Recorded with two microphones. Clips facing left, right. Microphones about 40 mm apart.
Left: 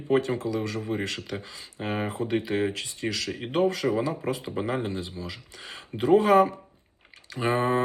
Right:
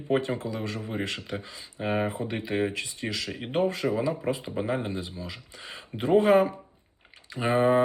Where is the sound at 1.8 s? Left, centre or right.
Centre.